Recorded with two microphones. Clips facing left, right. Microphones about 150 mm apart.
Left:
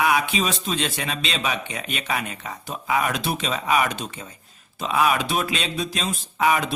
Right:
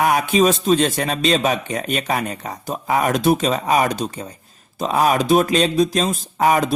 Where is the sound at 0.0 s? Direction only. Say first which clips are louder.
Right 6 dB; 45° right (ahead or behind).